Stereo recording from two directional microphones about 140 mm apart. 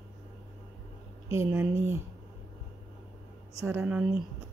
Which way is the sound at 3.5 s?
20° right (ahead or behind).